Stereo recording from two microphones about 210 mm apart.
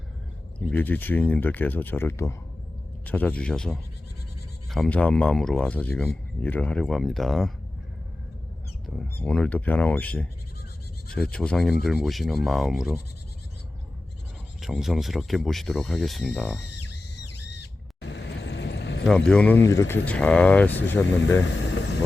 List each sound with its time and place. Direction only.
0.7 s a man's voice: 10° left (ahead or behind)
9.0 s a man's voice: 5° left (ahead or behind)
14.6 s a man's voice: centre (ahead or behind)
16.6 s a sound: 55° left (ahead or behind)
18.0 s vehicle: 55° left (ahead or behind)
19.0 s speech: 5° left (ahead or behind)
21.7 s vehicle: 55° left (ahead or behind)